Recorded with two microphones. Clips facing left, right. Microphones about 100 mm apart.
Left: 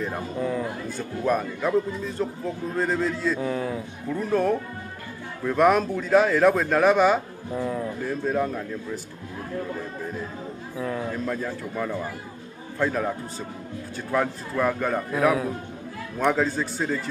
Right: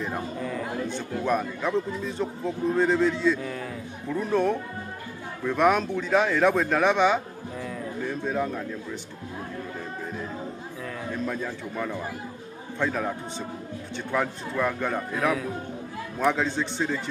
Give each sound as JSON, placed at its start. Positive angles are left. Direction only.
{"t": 0.8, "sound": "speech", "side_deg": 5}
{"t": 3.3, "sound": "speech", "side_deg": 30}
{"t": 4.1, "sound": "speech", "side_deg": 0}
{"t": 7.5, "sound": "a man's voice", "side_deg": 30}
{"t": 8.0, "sound": "speech", "side_deg": 0}
{"t": 11.2, "sound": "speech", "side_deg": 0}